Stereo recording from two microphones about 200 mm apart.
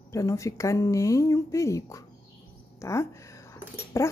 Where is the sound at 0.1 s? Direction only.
15° left (ahead or behind).